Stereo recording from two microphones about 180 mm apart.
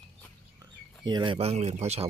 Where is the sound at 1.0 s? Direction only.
25° right (ahead or behind).